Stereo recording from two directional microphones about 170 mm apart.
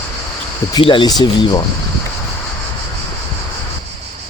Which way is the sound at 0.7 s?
30° left (ahead or behind).